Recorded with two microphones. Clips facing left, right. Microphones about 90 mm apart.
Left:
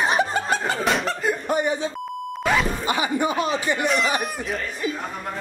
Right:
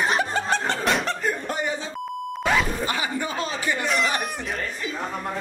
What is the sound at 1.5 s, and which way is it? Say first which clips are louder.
Speech: left 5 dB; 15° left (ahead or behind).